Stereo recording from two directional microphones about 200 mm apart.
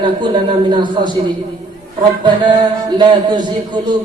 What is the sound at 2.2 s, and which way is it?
A man's voice, 25° right (ahead or behind).